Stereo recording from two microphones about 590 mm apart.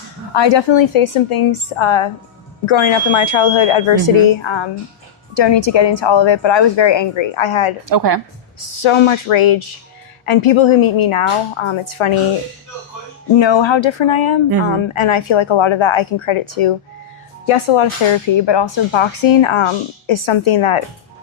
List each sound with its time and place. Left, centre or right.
0.3 s speech: left
7.9 s a woman's voice: right
8.6 s a woman's voice: left
13.3 s speech: left